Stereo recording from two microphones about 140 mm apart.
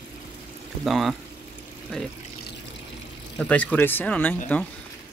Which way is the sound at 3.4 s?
10° left (ahead or behind).